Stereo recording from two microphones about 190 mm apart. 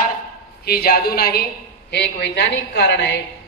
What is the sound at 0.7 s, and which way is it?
A woman's voice, 55° left (ahead or behind).